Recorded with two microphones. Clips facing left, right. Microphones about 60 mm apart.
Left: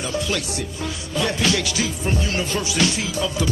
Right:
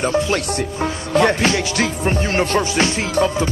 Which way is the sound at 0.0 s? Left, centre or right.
Right.